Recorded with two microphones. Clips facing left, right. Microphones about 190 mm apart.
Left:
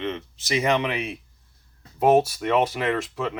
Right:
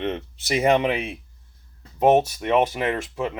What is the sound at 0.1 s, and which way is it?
Speech, 55° right (ahead or behind).